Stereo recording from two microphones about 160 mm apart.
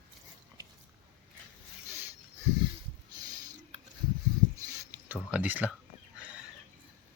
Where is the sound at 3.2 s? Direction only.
25° right (ahead or behind).